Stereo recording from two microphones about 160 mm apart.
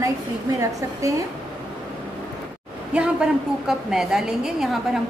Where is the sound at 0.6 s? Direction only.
20° right (ahead or behind).